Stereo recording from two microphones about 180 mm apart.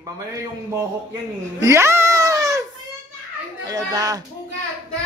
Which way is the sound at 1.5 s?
15° right (ahead or behind).